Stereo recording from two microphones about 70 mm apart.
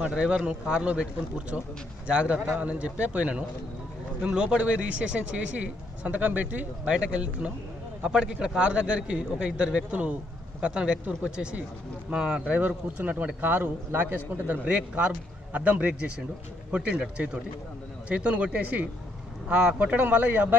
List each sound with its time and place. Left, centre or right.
0.0 s a man's voice: centre
2.0 s a man's voice: centre